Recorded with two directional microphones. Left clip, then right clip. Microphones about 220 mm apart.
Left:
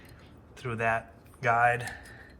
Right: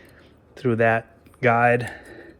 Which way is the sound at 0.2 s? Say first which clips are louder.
Right 14 dB; 45° right (ahead or behind).